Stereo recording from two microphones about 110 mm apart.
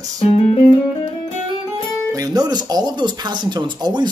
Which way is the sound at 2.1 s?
35° right (ahead or behind).